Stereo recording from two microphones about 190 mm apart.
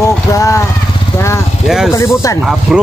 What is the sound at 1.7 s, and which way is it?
Speech, 5° right (ahead or behind).